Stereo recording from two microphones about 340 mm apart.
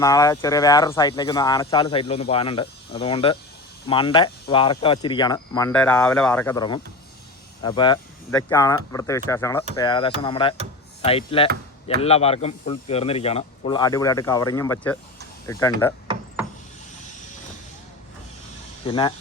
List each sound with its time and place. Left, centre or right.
0.0 s speech: centre
18.9 s speech: centre